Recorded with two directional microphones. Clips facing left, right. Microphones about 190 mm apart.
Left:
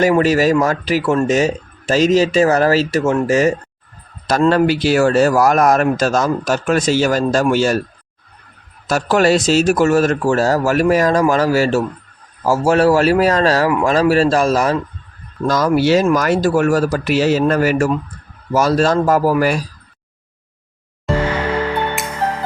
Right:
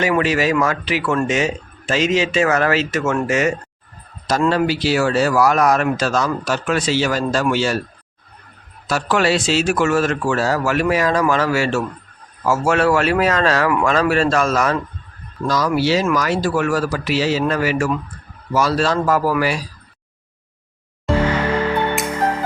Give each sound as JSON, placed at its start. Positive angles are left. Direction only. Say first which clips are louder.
{"t": 0.0, "sound": "a man's voice", "louder": "left 5 dB", "side_deg": 40}
{"t": 4.3, "sound": "speech", "louder": "left 4 dB", "side_deg": 55}
{"t": 8.9, "sound": "a man's voice", "louder": "left 4 dB", "side_deg": 45}
{"t": 15.4, "sound": "speech", "louder": "left 4 dB", "side_deg": 50}
{"t": 22.1, "sound": "music", "louder": "right 1 dB", "side_deg": -15}